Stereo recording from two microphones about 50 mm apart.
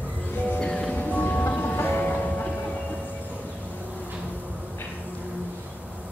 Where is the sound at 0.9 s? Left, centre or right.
Left.